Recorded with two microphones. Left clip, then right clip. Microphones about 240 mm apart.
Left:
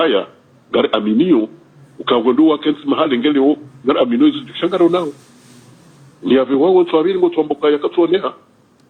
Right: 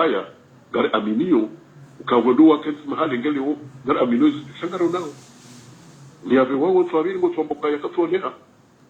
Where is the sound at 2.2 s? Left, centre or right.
Left.